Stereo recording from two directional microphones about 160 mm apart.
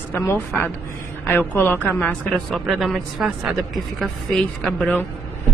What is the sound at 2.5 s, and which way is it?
A man's voice, centre (ahead or behind).